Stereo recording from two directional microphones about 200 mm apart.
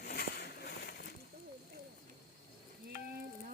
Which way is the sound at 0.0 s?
50° left (ahead or behind).